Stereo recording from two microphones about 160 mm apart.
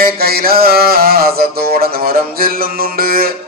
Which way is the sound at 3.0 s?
65° right (ahead or behind).